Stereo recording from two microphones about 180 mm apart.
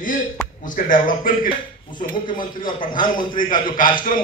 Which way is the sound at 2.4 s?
25° left (ahead or behind).